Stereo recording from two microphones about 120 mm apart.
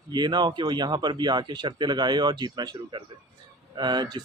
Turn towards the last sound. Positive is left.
turn(degrees=-35)  # may be behind; listen again after turning